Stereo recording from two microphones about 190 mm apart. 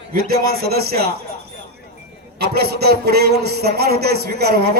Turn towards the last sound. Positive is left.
turn(degrees=-55)  # may be behind; listen again after turning